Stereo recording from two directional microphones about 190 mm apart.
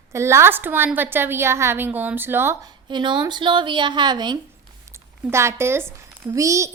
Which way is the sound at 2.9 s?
25° right (ahead or behind).